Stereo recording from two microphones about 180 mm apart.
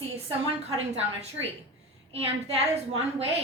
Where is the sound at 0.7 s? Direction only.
35° right (ahead or behind).